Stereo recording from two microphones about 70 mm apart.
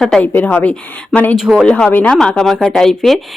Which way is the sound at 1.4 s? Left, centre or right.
Centre.